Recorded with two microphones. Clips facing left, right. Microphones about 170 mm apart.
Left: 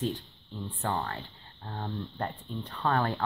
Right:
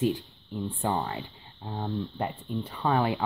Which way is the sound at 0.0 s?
10° right (ahead or behind).